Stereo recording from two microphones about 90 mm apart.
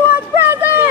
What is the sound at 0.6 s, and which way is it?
Vehicle, 20° right (ahead or behind).